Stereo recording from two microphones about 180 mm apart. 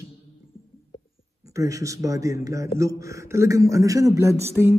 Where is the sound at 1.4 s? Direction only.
15° right (ahead or behind).